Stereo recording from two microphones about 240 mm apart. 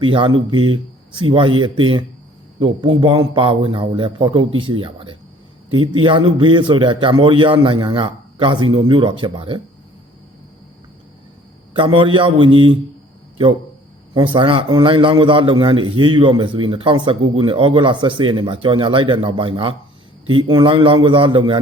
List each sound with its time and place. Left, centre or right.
0.0 s a man's voice: centre
11.9 s a man's voice: right
14.1 s a man's voice: centre